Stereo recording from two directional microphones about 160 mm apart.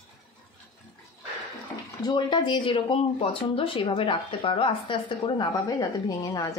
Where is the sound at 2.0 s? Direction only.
30° left (ahead or behind).